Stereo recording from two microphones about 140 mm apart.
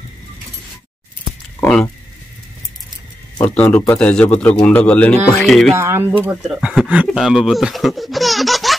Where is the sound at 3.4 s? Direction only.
10° left (ahead or behind).